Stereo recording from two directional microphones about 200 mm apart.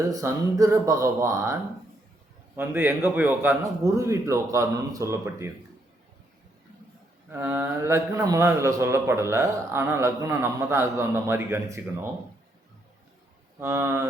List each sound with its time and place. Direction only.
0.1 s a man's voice: 15° right (ahead or behind)
2.6 s a man's voice: 10° right (ahead or behind)
7.3 s a man's voice: 10° right (ahead or behind)
13.6 s a man's voice: 10° right (ahead or behind)